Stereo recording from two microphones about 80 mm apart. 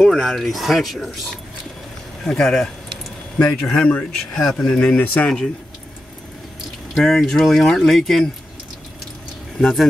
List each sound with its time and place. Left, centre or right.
0.0 s speech: centre
2.2 s speech: centre
4.7 s speech: centre
7.0 s speech: centre
9.6 s speech: centre